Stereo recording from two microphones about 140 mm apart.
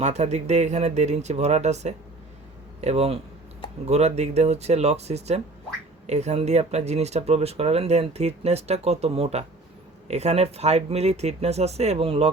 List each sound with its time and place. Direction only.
0.0 s speech: 55° right (ahead or behind)